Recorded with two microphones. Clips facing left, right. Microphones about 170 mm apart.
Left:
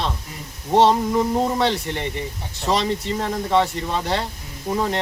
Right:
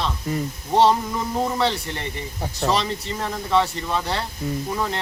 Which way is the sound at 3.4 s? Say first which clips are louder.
Even; 20° left (ahead or behind).